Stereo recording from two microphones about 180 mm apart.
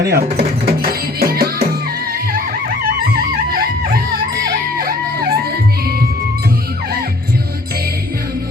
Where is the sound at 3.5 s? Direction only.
55° right (ahead or behind).